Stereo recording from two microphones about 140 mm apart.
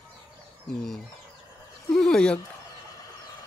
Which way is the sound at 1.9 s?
5° left (ahead or behind).